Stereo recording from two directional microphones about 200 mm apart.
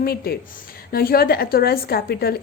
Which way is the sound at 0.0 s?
50° left (ahead or behind).